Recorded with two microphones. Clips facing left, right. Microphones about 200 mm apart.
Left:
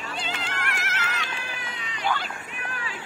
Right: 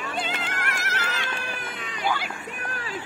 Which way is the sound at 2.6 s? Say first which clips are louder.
Even; 40° right (ahead or behind).